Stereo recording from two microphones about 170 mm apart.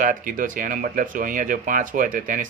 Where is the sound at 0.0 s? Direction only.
50° right (ahead or behind).